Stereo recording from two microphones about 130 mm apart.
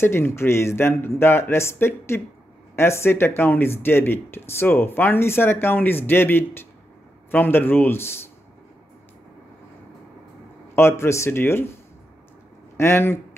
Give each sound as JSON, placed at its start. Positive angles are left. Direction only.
{"t": 0.0, "sound": "speech", "side_deg": 20}
{"t": 10.8, "sound": "speech", "side_deg": 20}
{"t": 12.7, "sound": "speech", "side_deg": 20}